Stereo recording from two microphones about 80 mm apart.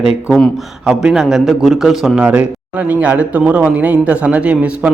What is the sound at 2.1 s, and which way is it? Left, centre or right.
A man's voice, centre.